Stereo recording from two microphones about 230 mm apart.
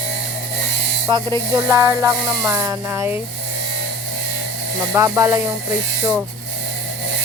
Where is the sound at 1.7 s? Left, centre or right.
Centre.